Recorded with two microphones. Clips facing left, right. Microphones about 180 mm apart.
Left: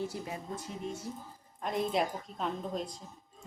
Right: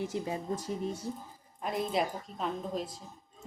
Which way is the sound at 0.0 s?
20° right (ahead or behind).